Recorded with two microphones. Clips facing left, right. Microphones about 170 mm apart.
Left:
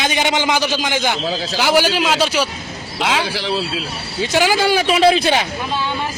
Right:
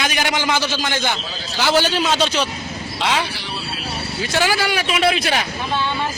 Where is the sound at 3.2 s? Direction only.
90° left.